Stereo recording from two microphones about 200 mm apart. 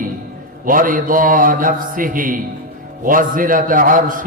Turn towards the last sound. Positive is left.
turn(degrees=-40)  # may be behind; listen again after turning